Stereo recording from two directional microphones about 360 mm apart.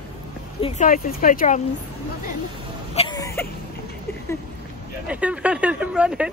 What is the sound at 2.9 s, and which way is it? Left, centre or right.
Throat clearing, centre.